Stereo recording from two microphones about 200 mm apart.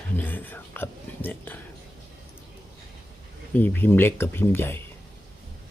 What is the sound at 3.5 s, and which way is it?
Speech, 10° left (ahead or behind).